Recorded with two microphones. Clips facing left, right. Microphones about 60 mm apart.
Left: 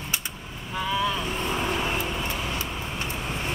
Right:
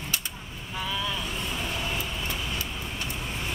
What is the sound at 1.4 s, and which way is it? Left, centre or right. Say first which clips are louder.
Vehicle: left 5 dB; left.